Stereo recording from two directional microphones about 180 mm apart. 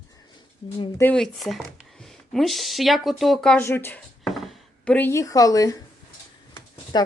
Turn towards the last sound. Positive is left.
turn(degrees=20)  # may be behind; listen again after turning